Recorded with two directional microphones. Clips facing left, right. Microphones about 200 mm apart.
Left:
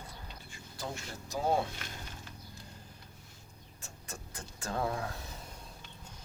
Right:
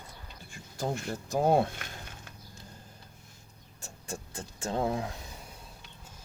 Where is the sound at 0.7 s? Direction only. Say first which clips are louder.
Right 8 dB; 50° right (ahead or behind).